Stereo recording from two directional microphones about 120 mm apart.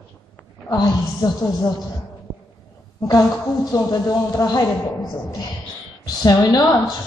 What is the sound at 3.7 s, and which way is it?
A man's voice, 30° left (ahead or behind).